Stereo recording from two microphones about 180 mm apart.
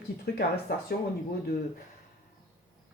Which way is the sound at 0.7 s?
55° left (ahead or behind).